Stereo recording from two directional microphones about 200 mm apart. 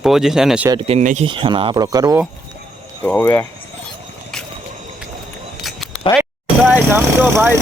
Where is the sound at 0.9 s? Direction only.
35° right (ahead or behind); by 2.2 s 15° right (ahead or behind).